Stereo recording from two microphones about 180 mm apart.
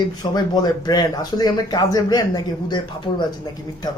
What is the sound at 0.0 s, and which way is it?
Speech, 25° left (ahead or behind).